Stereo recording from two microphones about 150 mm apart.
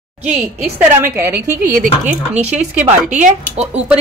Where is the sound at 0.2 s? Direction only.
10° right (ahead or behind).